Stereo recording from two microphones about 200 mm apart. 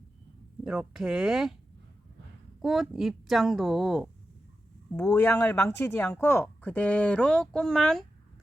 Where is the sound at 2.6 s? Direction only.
Centre (ahead or behind).